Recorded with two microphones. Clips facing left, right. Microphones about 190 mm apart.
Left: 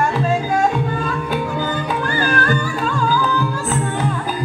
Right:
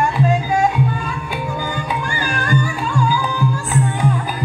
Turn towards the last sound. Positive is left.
turn(degrees=-15)  # may be behind; listen again after turning